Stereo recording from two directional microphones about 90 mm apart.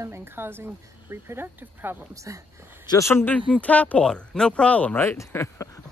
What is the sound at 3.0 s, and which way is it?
Speech, 25° left (ahead or behind).